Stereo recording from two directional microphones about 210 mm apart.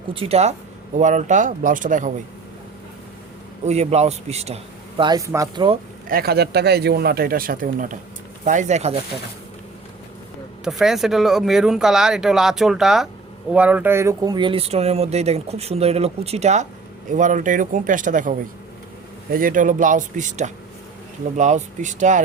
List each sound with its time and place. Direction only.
0.1 s speech: 25° right (ahead or behind)
3.7 s speech: 30° right (ahead or behind)
6.1 s speech: 45° right (ahead or behind)
10.6 s speech: centre (ahead or behind); by 22.2 s 35° right (ahead or behind)